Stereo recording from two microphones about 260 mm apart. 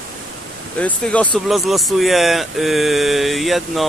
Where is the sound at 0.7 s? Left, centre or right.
Centre.